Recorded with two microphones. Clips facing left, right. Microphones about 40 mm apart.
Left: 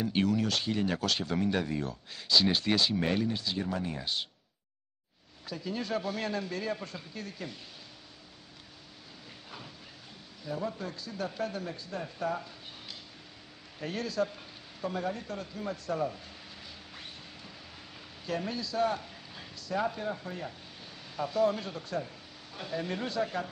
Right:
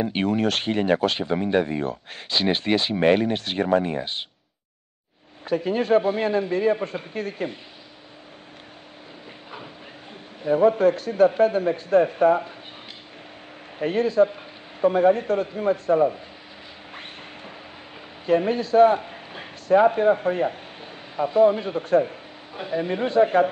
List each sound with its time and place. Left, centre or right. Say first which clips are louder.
0.0 s speech: right 6 dB; right
5.4 s speech: right 13 dB; right
10.4 s speech: right 18 dB; right
13.7 s speech: right 13 dB; right
16.9 s a sound: right 8 dB; right
18.2 s a man's voice: right 14 dB; right
22.5 s speech: right 9 dB; right